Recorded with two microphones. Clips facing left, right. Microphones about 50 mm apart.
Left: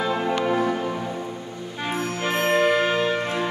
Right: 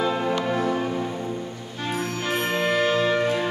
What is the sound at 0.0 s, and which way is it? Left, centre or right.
Music, centre.